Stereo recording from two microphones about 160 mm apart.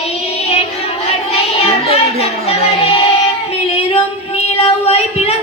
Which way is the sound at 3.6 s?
40° left (ahead or behind).